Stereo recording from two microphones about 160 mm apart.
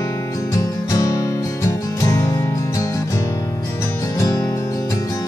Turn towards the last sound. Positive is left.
turn(degrees=20)  # may be behind; listen again after turning